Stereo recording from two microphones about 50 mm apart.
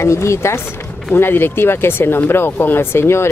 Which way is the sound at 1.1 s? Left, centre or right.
Left.